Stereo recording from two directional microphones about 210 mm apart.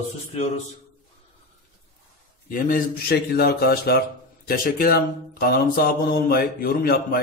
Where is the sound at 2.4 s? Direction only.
40° left (ahead or behind).